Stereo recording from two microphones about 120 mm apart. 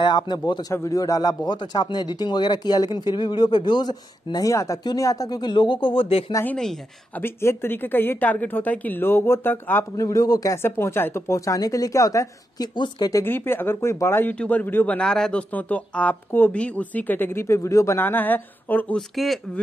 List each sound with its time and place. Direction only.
0.0 s speech: 40° left (ahead or behind)
6.4 s speech: 5° left (ahead or behind)
7.2 s speech: 20° left (ahead or behind)
12.7 s speech: 40° left (ahead or behind)
13.1 s speech: 20° left (ahead or behind)
14.3 s speech: 10° left (ahead or behind)
18.9 s speech: centre (ahead or behind)